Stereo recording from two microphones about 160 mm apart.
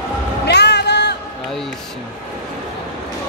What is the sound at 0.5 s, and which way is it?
Music, 90° left.